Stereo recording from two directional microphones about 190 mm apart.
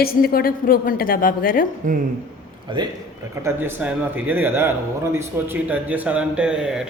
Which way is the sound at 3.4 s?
10° right (ahead or behind).